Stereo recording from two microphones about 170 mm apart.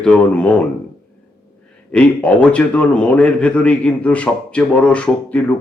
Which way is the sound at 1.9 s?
5° left (ahead or behind).